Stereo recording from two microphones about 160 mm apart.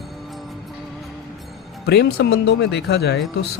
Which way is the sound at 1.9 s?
90° left.